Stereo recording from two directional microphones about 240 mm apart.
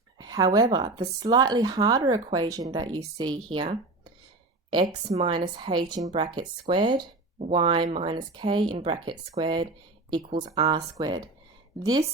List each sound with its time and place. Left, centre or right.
0.2 s speech: centre